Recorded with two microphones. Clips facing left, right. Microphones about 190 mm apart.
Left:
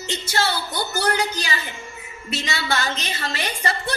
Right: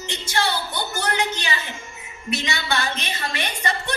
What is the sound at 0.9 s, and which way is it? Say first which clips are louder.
A woman's voice: left 3 dB; 35° left (ahead or behind).